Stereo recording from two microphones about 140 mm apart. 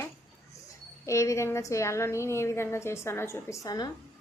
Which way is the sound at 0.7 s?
20° left (ahead or behind).